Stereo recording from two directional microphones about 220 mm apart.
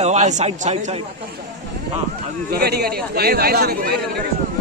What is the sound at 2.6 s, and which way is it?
A man's voice, 45° right (ahead or behind).